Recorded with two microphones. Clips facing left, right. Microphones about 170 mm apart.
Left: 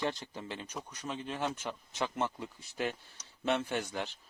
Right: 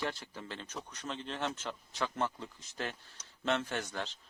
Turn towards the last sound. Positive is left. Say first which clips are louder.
# left 3 dB
turn(degrees=15)  # may be behind; listen again after turning